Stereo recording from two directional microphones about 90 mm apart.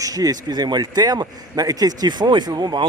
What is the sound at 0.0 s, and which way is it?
Speech, 45° right (ahead or behind).